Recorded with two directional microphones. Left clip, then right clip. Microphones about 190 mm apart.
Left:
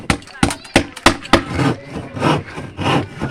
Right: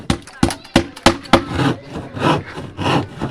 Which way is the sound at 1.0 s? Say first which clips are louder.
Right 1 dB; 40° left (ahead or behind).